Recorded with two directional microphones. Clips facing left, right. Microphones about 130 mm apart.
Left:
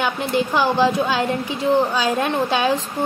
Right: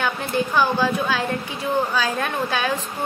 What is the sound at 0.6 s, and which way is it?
Speech, 20° left (ahead or behind).